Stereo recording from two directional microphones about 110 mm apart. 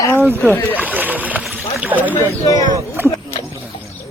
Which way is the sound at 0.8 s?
15° right (ahead or behind).